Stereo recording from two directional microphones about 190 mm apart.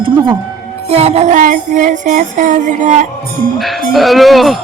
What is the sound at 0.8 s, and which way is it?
Music, 35° right (ahead or behind).